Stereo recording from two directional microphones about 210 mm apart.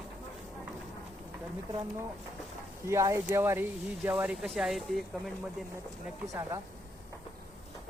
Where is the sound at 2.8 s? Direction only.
15° right (ahead or behind).